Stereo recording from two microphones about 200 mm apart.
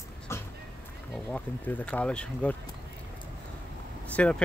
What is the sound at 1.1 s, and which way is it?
Speech, 10° left (ahead or behind).